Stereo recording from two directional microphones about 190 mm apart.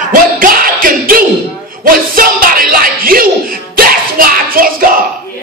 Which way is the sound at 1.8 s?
45° right (ahead or behind).